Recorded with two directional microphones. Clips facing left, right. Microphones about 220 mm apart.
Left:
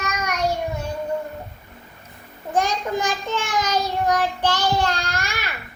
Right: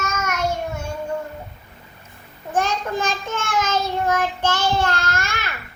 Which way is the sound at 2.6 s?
15° left (ahead or behind).